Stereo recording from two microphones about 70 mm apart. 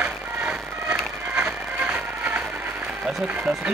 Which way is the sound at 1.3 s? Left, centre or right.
Centre.